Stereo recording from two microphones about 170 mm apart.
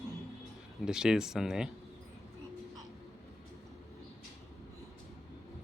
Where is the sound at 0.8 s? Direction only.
5° right (ahead or behind).